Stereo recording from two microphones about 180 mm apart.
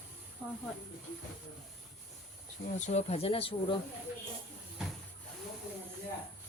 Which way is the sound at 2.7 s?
40° left (ahead or behind).